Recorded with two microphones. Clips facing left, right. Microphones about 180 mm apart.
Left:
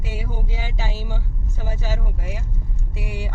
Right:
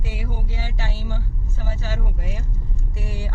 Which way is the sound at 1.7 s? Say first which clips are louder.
Left 1 dB; 10° left (ahead or behind).